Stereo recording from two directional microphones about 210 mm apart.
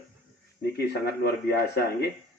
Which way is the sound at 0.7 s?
50° left (ahead or behind).